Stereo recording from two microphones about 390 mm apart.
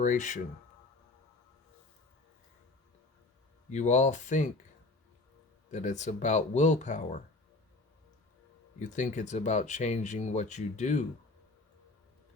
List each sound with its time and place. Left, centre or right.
0.0 s speech: centre
3.7 s speech: centre
5.7 s speech: centre
8.8 s speech: centre